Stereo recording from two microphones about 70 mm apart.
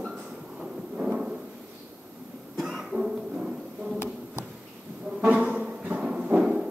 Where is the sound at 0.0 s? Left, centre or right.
Centre.